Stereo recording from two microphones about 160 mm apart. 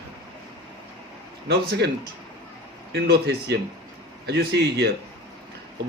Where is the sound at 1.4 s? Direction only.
85° right.